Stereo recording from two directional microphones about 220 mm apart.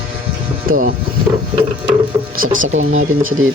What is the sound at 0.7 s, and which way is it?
Speech, 40° right (ahead or behind).